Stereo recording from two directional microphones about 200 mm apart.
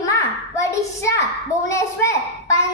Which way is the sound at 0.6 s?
15° left (ahead or behind).